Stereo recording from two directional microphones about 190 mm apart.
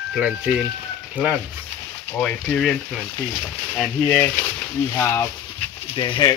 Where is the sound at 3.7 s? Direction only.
10° left (ahead or behind).